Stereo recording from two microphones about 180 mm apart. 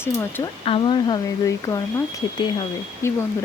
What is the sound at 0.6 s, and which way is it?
Speech, 30° left (ahead or behind).